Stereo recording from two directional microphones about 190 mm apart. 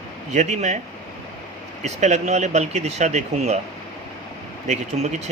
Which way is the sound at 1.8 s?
35° right (ahead or behind).